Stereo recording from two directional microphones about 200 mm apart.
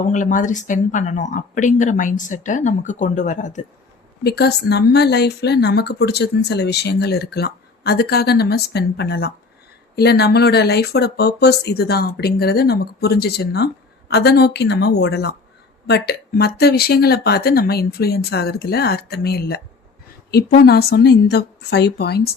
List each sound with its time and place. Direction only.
0.1 s speech: 40° left (ahead or behind)
4.2 s a woman's voice: 55° left (ahead or behind)